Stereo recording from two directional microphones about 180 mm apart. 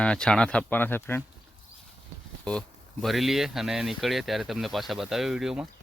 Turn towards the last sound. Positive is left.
turn(degrees=-5)  # may be behind; listen again after turning